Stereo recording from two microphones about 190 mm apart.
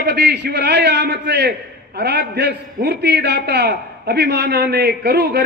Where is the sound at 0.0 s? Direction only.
65° right (ahead or behind).